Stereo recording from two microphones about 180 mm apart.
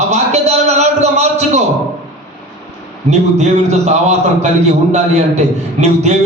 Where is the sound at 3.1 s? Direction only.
40° right (ahead or behind).